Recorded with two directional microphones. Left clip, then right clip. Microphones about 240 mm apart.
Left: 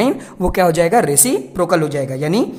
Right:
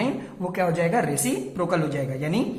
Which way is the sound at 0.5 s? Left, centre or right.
Left.